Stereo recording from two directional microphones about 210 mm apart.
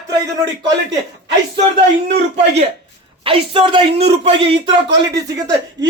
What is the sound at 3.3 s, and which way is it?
A man's voice, 25° right (ahead or behind).